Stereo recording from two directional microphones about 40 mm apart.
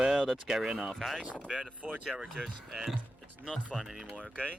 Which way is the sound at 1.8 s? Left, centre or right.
Right.